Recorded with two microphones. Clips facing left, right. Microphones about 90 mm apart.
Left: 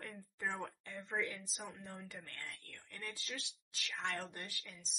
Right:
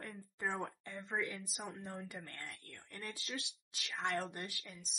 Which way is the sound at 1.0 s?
10° right (ahead or behind).